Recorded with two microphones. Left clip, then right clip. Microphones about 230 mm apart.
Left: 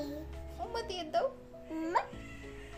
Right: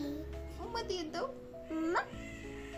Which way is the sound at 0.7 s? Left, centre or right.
Left.